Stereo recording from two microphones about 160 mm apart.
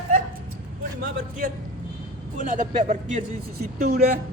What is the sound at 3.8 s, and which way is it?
Speech, 80° right.